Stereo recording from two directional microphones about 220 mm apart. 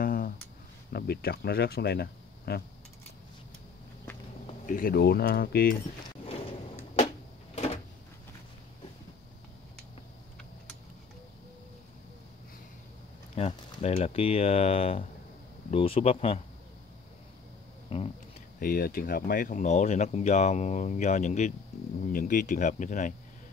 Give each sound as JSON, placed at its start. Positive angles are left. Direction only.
{"t": 0.0, "sound": "a sound", "side_deg": 40}
{"t": 0.9, "sound": "speech", "side_deg": 45}
{"t": 4.5, "sound": "speech", "side_deg": 35}
{"t": 7.5, "sound": "cupboard open or close", "side_deg": 30}
{"t": 13.3, "sound": "speech", "side_deg": 30}
{"t": 17.8, "sound": "a sound", "side_deg": 25}
{"t": 18.6, "sound": "speech", "side_deg": 40}